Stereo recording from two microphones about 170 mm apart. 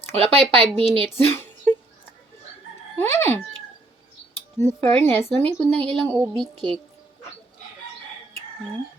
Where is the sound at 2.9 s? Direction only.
15° left (ahead or behind).